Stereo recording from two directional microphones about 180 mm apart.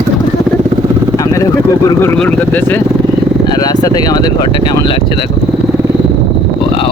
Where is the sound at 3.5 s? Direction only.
20° left (ahead or behind).